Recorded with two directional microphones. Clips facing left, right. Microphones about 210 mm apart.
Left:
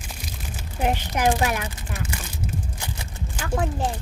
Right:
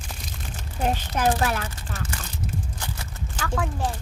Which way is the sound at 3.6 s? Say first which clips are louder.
Left 2 dB; 25° left (ahead or behind).